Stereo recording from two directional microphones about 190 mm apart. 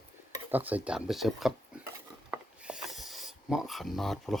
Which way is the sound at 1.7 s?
5° right (ahead or behind).